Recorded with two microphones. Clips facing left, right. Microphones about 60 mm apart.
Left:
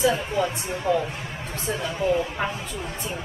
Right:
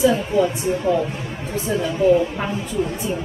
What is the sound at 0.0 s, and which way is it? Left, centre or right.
Speech, centre.